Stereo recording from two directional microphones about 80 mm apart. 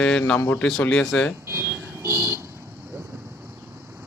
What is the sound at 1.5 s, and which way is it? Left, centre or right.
Vehicle, right.